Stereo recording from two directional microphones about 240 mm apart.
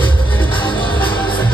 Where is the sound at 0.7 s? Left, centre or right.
Left.